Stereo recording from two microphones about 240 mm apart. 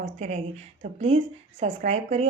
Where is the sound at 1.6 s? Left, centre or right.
Right.